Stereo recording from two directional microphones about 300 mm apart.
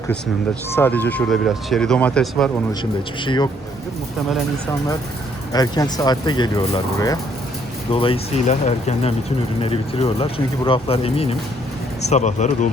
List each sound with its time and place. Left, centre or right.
0.8 s speech: centre
3.2 s speech: centre
5.5 s speech: centre